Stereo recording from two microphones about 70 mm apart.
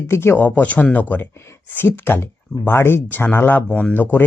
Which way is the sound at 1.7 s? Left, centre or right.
Left.